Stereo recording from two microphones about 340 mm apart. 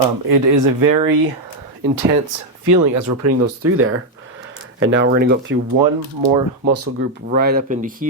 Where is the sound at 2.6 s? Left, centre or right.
Right.